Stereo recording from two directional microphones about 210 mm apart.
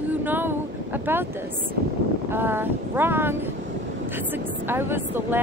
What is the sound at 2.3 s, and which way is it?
Speech, 10° right (ahead or behind).